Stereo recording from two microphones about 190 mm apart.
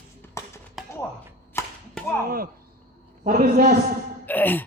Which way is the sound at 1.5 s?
15° left (ahead or behind).